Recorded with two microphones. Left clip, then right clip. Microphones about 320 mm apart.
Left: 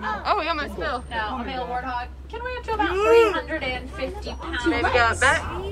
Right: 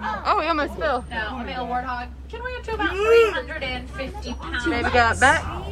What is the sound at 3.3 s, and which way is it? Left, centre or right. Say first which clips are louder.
Speech: left 1 dB; left.